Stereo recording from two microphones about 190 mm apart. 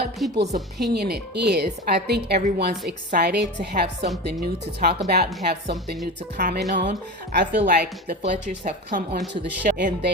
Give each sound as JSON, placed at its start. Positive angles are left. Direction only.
{"t": 0.2, "sound": "a woman's voice", "side_deg": 0}
{"t": 0.8, "sound": "speech", "side_deg": -60}
{"t": 6.7, "sound": "speech", "side_deg": -40}
{"t": 7.3, "sound": "speech", "side_deg": -55}
{"t": 8.4, "sound": "speech", "side_deg": -40}